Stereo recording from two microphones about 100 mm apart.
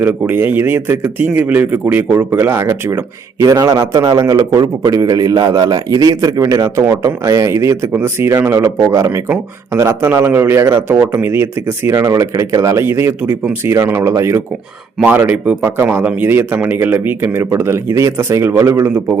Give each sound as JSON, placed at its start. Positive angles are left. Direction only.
{"t": 0.0, "sound": "a man's voice", "side_deg": -20}
{"t": 3.4, "sound": "a man's voice", "side_deg": -35}
{"t": 11.9, "sound": "a man's voice", "side_deg": -35}